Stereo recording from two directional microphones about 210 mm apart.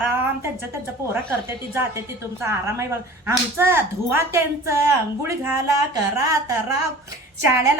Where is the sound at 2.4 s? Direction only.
15° right (ahead or behind).